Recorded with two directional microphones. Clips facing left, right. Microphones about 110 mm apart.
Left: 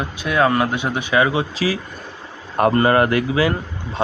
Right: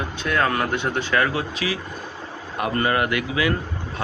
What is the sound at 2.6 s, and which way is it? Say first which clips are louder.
Speech: left 7 dB; 35° left (ahead or behind).